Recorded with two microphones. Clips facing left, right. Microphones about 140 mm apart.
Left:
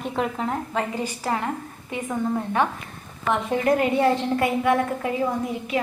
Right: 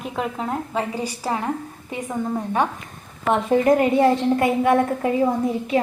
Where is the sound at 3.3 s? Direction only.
25° right (ahead or behind).